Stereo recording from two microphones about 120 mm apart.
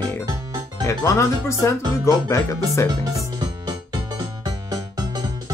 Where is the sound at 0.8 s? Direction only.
25° left (ahead or behind).